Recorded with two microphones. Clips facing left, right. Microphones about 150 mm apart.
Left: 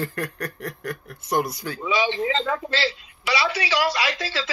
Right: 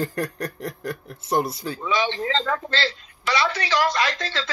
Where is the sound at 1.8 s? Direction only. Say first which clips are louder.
Left 1 dB; 10° left (ahead or behind).